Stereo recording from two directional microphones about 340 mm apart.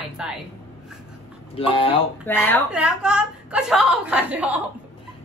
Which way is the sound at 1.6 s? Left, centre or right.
Centre.